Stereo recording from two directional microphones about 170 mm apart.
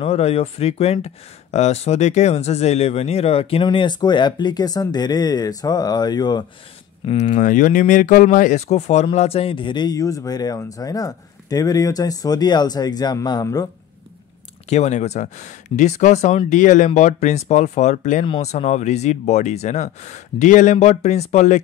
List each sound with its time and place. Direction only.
0.0 s speech: 35° left (ahead or behind)
7.1 s speech: 45° left (ahead or behind); by 13.7 s 20° left (ahead or behind)
14.7 s speech: 40° left (ahead or behind)
18.2 s speech: 35° left (ahead or behind)